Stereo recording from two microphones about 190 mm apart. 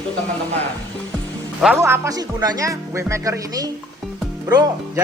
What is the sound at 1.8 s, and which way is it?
Speech, 15° right (ahead or behind).